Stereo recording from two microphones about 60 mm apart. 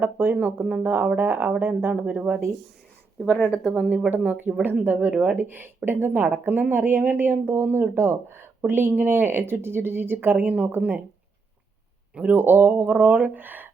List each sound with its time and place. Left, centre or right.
0.0 s speech: right
3.5 s speech: centre
4.1 s speech: right
12.1 s speech: right